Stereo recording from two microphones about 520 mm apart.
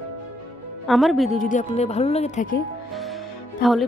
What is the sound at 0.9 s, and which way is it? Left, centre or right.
Speech, centre.